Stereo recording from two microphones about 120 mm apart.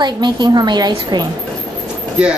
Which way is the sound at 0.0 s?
35° right (ahead or behind).